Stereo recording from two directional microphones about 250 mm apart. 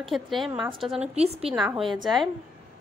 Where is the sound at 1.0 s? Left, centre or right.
Right.